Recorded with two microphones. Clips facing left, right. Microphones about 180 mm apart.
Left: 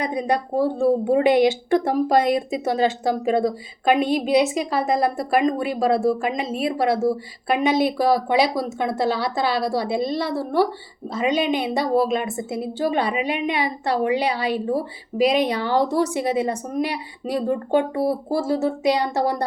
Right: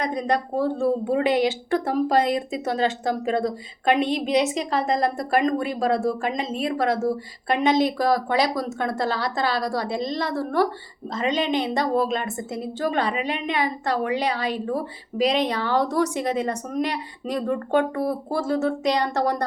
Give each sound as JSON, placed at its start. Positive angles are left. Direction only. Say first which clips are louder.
{"t": 0.0, "sound": "a woman's voice", "louder": "left 1 dB", "side_deg": 10}
{"t": 18.0, "sound": "speech", "louder": "left 3 dB", "side_deg": 30}
{"t": 18.3, "sound": "a woman's voice", "louder": "right 2 dB", "side_deg": 5}